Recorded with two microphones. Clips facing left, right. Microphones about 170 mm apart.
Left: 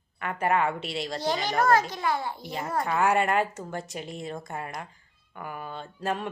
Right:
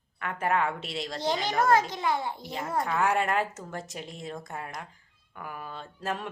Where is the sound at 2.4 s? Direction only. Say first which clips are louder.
Left 1 dB; centre (ahead or behind).